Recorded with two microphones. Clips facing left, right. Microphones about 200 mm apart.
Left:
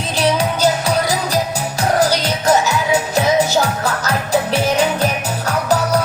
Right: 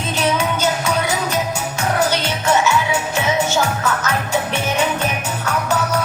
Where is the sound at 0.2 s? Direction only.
35° left (ahead or behind).